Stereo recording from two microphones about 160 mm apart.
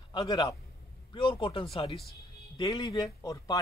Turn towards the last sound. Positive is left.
turn(degrees=20)  # may be behind; listen again after turning